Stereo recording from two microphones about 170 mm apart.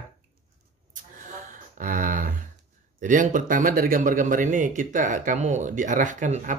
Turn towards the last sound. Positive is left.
turn(degrees=-50)  # may be behind; listen again after turning